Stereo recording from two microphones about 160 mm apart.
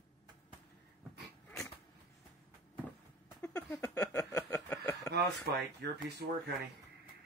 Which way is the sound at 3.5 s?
10° left (ahead or behind).